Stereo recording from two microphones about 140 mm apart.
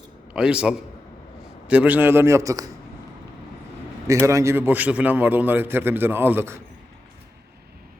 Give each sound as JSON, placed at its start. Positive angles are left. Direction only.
{"t": 0.3, "sound": "a man's voice", "side_deg": -5}
{"t": 4.0, "sound": "a man's voice", "side_deg": -20}